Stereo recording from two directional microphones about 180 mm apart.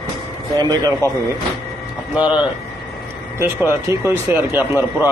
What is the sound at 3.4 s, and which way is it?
Speech, 15° right (ahead or behind).